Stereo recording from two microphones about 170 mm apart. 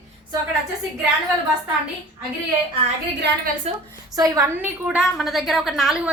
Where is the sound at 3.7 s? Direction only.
35° right (ahead or behind).